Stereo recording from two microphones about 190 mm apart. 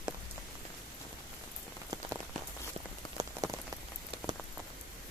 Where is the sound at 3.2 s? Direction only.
15° right (ahead or behind).